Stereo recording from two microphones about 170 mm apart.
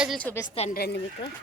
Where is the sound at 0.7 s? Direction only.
70° left (ahead or behind).